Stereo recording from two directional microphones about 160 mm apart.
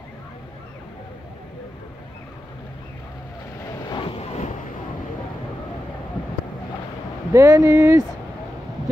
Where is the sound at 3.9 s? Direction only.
30° left (ahead or behind).